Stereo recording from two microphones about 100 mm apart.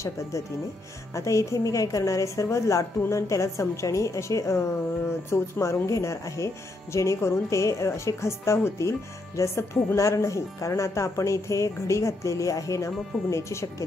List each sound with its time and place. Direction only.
1.1 s speech: 30° left (ahead or behind)